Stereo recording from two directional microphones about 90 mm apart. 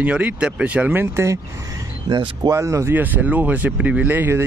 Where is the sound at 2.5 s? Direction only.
35° right (ahead or behind).